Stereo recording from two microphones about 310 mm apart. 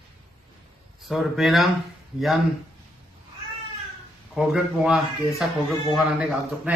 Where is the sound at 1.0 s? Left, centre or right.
Centre.